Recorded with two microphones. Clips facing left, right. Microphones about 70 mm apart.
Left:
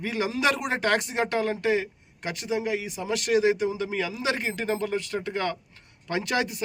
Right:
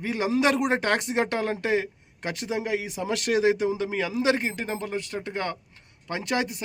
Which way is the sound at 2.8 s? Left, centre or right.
Right.